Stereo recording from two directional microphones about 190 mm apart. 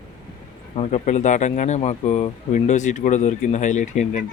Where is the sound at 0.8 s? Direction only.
35° left (ahead or behind).